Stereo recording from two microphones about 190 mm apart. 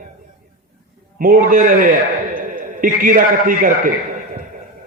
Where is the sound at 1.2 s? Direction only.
45° right (ahead or behind).